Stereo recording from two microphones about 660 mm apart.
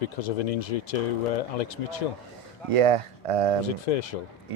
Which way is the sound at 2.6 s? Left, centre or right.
Right.